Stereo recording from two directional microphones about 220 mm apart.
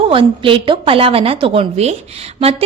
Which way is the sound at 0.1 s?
25° right (ahead or behind).